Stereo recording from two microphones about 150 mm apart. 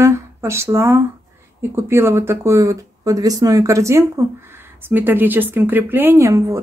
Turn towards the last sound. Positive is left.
turn(degrees=-20)  # may be behind; listen again after turning